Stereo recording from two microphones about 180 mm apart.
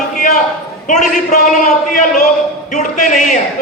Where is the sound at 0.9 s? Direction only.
45° left (ahead or behind).